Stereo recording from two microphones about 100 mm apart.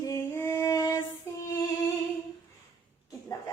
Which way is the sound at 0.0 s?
30° left (ahead or behind).